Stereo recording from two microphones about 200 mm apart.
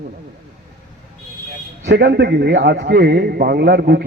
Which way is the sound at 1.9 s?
55° right (ahead or behind).